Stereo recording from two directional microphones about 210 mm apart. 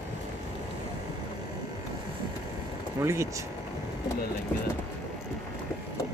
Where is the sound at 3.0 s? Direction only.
15° right (ahead or behind).